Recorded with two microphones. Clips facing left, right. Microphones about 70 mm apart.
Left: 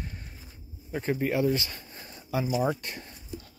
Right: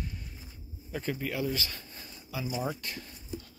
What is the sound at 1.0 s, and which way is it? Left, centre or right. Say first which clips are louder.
Speech: left 7 dB; left.